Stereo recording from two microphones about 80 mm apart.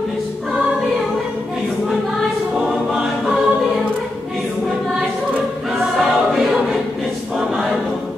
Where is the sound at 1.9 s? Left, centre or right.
Centre.